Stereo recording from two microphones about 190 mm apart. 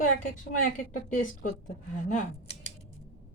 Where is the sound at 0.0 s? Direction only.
45° left (ahead or behind).